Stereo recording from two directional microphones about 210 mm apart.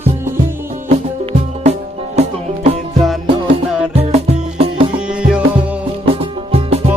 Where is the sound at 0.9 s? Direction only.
30° right (ahead or behind).